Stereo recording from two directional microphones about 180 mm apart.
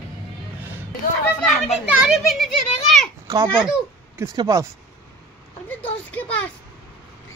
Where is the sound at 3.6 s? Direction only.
5° right (ahead or behind).